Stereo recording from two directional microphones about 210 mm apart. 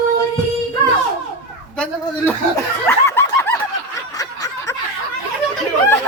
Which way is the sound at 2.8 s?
10° left (ahead or behind).